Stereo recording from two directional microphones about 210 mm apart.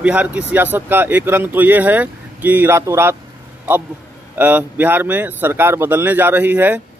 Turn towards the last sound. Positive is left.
turn(degrees=-10)  # may be behind; listen again after turning